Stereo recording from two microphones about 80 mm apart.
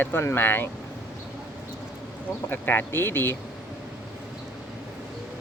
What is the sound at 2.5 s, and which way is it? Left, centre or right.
Speech, left.